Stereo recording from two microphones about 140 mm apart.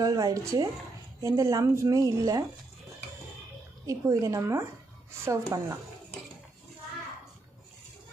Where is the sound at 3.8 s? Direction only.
20° right (ahead or behind).